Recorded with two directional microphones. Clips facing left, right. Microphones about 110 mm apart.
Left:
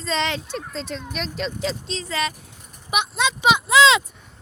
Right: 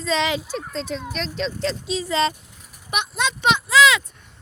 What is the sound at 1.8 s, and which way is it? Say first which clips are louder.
Speech: right 5 dB; 10° right (ahead or behind).